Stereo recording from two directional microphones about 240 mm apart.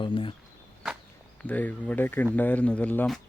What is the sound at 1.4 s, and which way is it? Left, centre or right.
Speech, centre.